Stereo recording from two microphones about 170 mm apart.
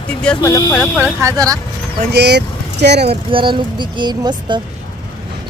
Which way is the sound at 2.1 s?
80° right.